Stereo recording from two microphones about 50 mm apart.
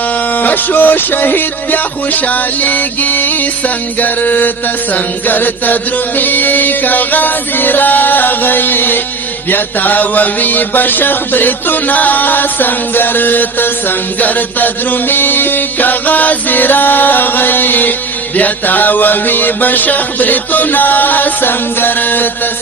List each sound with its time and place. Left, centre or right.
0.3 s music: left